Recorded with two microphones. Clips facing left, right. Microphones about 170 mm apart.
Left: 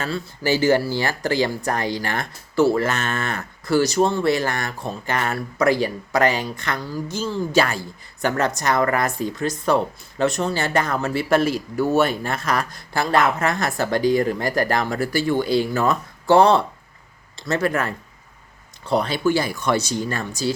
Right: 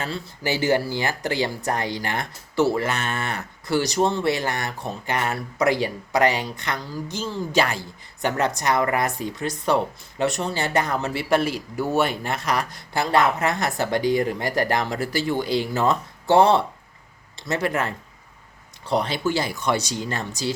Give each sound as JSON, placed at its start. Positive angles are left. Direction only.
{"t": 0.0, "sound": "speech", "side_deg": -20}
{"t": 11.3, "sound": "speech", "side_deg": 45}
{"t": 11.8, "sound": "speech", "side_deg": -15}